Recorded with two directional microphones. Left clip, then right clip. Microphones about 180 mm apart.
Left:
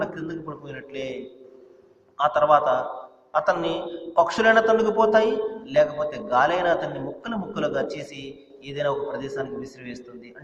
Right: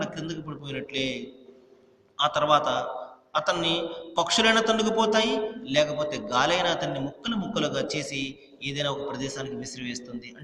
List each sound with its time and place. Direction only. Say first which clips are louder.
0.0 s a man's voice: left 4 dB; 35° right (ahead or behind)
2.1 s a man's voice: left 4 dB; 35° right (ahead or behind)